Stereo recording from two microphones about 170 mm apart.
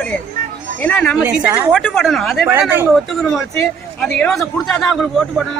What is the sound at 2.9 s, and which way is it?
A man's voice, 5° left (ahead or behind).